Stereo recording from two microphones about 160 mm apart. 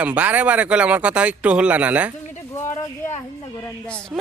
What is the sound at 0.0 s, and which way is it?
Speech, 10° right (ahead or behind).